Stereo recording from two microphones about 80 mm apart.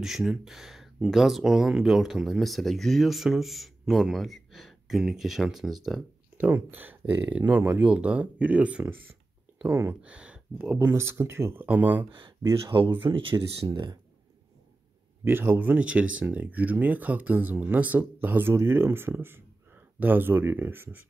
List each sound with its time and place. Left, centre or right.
0.0 s speech: centre
6.3 s speech: right
9.7 s speech: right
10.0 s speech: centre; by 11.6 s right
11.6 s speech: right
12.6 s speech: right
13.7 s speech: right
15.2 s speech: right